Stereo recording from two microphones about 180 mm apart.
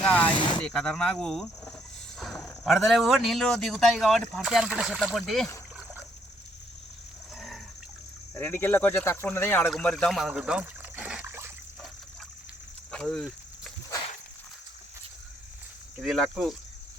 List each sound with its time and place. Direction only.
0.0 s speech: 10° left (ahead or behind)
0.3 s a sound: 25° left (ahead or behind)
0.6 s speech: 5° left (ahead or behind)
7.3 s a sound: centre (ahead or behind)
8.4 s speech: 10° left (ahead or behind); by 11.5 s 10° right (ahead or behind)
12.9 s snake: 5° left (ahead or behind)
16.0 s speech: centre (ahead or behind)